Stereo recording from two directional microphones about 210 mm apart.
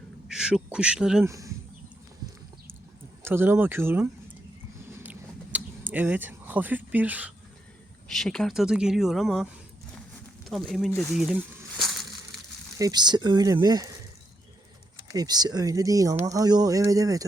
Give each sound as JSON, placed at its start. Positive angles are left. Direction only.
{"t": 0.3, "sound": "speech", "side_deg": -5}
{"t": 1.3, "sound": "speech", "side_deg": -15}
{"t": 3.2, "sound": "speech", "side_deg": -10}
{"t": 5.0, "sound": "a sound", "side_deg": -5}
{"t": 8.0, "sound": "speech", "side_deg": 0}
{"t": 11.8, "sound": "crushing", "side_deg": 0}
{"t": 12.8, "sound": "speech", "side_deg": -20}
{"t": 14.9, "sound": "speech", "side_deg": -20}